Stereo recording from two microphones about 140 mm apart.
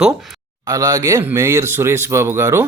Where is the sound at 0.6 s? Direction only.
25° right (ahead or behind).